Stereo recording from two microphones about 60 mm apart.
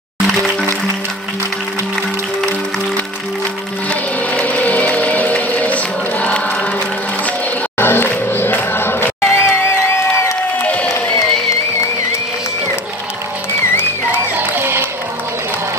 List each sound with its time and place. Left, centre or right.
3.9 s music: left
6.2 s choir: left
7.8 s music: left
9.3 s music: left
10.6 s a sound: left
14.3 s music: right